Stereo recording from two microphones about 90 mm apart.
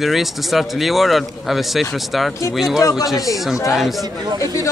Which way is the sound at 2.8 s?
40° left (ahead or behind).